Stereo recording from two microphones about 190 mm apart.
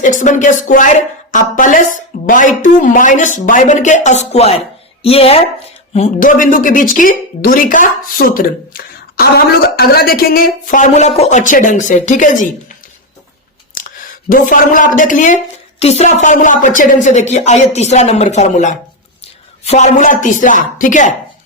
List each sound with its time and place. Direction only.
0.0 s a woman's voice: 40° left (ahead or behind)
14.3 s a woman's voice: 45° left (ahead or behind)